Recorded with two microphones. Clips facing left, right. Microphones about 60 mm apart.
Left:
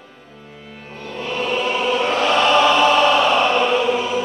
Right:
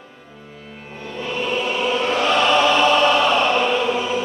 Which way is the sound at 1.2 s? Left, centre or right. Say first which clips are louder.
Left 1 dB; centre.